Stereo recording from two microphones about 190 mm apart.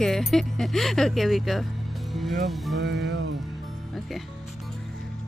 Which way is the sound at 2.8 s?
65° right (ahead or behind).